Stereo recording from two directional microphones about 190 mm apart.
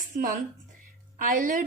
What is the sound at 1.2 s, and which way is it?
Speech, 45° right (ahead or behind).